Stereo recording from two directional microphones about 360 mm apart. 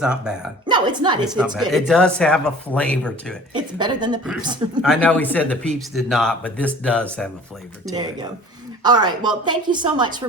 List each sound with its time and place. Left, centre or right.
0.0 s a woman's voice: centre
1.4 s speech: centre
3.5 s a woman's voice: centre
4.8 s speech: centre
7.9 s a woman's voice: centre